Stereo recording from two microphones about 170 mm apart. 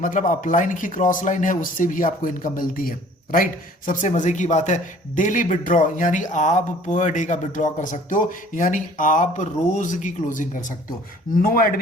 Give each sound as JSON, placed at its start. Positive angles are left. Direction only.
{"t": 0.0, "sound": "a man's voice", "side_deg": 50}